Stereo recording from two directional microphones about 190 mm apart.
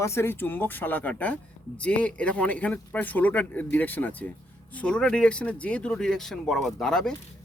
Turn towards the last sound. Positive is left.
turn(degrees=0)  # may be behind; listen again after turning